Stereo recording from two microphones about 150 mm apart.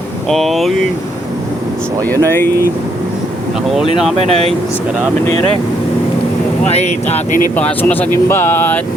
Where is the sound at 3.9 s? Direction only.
Centre (ahead or behind).